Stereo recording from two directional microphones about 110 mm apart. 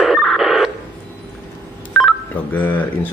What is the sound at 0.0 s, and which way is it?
Radio, centre (ahead or behind).